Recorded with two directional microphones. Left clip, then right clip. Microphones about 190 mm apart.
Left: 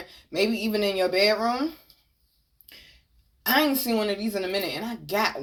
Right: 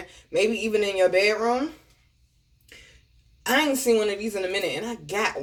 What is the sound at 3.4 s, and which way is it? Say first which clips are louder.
Speech: right 2 dB; 30° left (ahead or behind).